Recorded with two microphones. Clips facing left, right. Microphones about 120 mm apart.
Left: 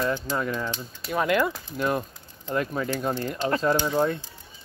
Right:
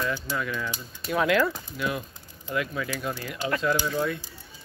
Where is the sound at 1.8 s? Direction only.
45° left (ahead or behind).